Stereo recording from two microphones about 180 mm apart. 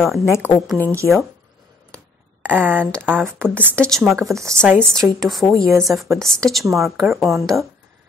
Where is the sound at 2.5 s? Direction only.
10° right (ahead or behind).